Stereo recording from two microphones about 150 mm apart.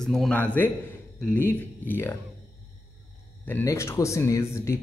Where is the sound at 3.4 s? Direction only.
15° left (ahead or behind).